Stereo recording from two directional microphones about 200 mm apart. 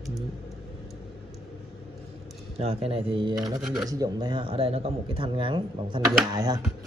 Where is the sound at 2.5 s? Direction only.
30° right (ahead or behind).